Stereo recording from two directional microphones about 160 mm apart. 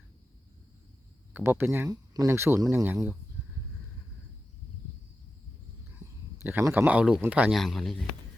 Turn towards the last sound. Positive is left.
turn(degrees=0)  # may be behind; listen again after turning